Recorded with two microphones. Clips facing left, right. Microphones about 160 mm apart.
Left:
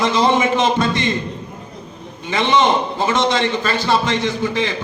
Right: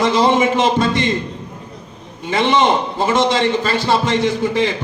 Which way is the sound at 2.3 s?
30° right (ahead or behind).